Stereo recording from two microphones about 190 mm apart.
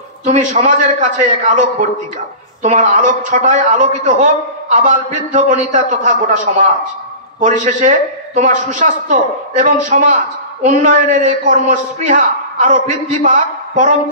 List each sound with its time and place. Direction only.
0.2 s a man's voice: 40° right (ahead or behind)